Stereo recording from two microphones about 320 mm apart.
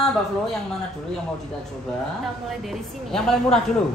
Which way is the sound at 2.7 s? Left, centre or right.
Centre.